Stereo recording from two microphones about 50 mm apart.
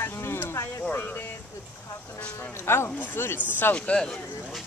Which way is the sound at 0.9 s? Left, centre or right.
Left.